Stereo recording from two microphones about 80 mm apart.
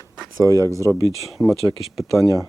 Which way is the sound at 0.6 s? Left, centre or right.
Right.